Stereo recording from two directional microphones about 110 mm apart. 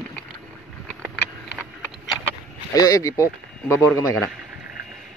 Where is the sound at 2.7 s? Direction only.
30° left (ahead or behind).